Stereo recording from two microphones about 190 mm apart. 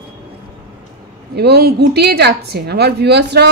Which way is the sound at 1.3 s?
60° right (ahead or behind).